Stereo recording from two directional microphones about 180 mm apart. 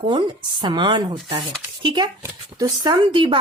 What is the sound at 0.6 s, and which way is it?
Speech, 25° right (ahead or behind).